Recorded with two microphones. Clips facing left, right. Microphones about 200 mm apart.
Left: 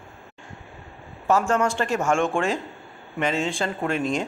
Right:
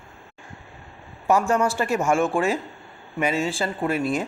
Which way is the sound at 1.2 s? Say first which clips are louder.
Right 1 dB; 10° right (ahead or behind).